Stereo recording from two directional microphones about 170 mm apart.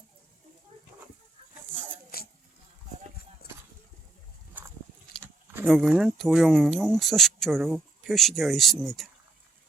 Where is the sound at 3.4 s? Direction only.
65° left (ahead or behind).